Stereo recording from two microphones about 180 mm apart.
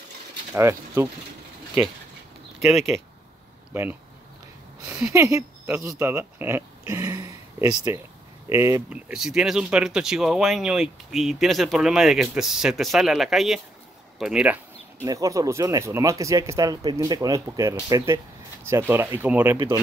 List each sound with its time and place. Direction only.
0.6 s speech: 15° right (ahead or behind)
2.6 s speech: centre (ahead or behind)
4.8 s speech: 15° right (ahead or behind)
6.9 s a sound: 15° right (ahead or behind)
8.5 s speech: 15° right (ahead or behind)
9.1 s speech: 5° right (ahead or behind)
15.0 s speech: 20° right (ahead or behind)